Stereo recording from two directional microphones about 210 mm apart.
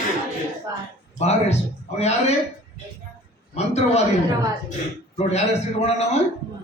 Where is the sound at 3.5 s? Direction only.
30° left (ahead or behind).